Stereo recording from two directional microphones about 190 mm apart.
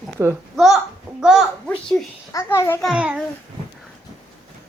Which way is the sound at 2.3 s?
15° left (ahead or behind).